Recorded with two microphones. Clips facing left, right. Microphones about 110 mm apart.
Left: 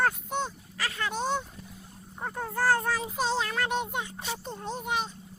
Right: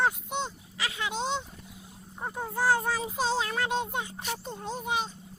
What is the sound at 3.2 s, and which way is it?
Speech, 30° right (ahead or behind).